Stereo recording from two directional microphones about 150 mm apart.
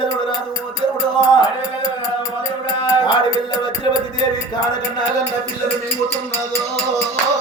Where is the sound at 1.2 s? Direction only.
30° left (ahead or behind).